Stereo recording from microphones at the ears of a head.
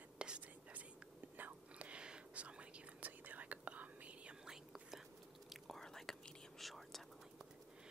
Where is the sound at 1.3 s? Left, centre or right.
Right.